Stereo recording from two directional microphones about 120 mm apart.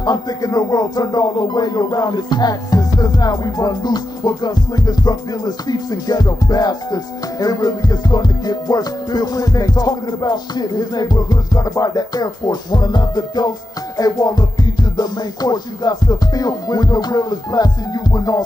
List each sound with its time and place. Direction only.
0.0 s speech: 30° left (ahead or behind)